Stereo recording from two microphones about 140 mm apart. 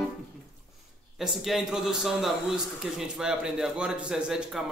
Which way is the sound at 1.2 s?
Centre (ahead or behind).